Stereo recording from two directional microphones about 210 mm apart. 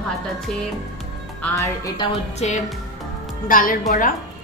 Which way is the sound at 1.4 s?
15° left (ahead or behind).